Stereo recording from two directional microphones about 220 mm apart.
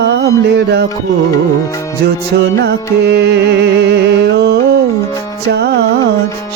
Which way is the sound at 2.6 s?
50° right (ahead or behind).